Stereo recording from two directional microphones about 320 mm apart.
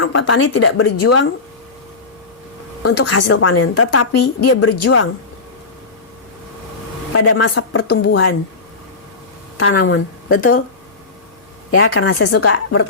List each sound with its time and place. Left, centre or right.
0.0 s a woman's voice: left
3.1 s a woman's voice: left
7.1 s a woman's voice: left
9.6 s a woman's voice: left
11.7 s a woman's voice: left